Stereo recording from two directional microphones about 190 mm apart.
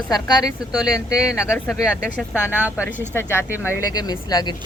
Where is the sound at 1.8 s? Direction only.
5° right (ahead or behind).